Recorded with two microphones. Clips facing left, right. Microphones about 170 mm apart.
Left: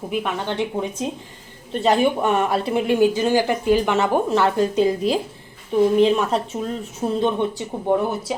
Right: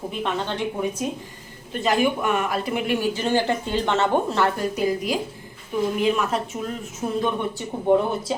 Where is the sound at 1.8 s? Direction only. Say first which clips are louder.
Left 3 dB; 30° left (ahead or behind).